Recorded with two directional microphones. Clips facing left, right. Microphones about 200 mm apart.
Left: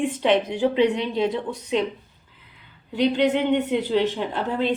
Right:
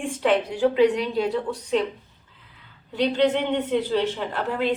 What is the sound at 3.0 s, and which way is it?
A woman's voice, 10° left (ahead or behind).